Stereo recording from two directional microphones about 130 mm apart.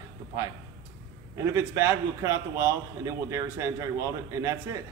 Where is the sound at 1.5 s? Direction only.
20° right (ahead or behind).